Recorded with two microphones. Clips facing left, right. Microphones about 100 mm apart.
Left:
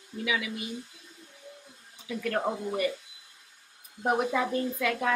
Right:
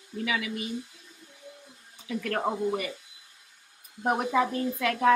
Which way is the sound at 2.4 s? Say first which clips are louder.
Right 1 dB; 5° right (ahead or behind).